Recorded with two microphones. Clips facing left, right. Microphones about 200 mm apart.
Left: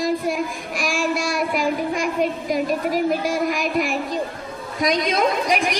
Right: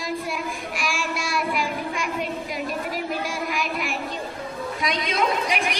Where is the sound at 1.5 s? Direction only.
45° left (ahead or behind).